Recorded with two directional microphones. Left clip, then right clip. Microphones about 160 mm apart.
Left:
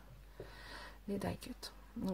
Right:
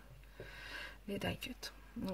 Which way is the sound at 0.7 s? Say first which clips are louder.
Even; 5° right (ahead or behind).